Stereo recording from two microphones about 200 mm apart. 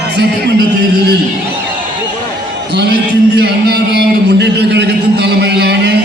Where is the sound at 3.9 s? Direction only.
55° right (ahead or behind).